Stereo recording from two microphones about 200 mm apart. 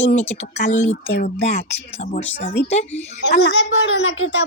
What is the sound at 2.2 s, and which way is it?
Speech, 60° left (ahead or behind).